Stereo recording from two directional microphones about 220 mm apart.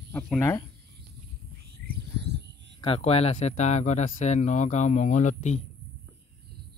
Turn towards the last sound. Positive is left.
turn(degrees=30)  # may be behind; listen again after turning